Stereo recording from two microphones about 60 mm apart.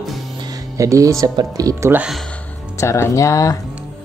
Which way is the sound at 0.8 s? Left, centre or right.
Right.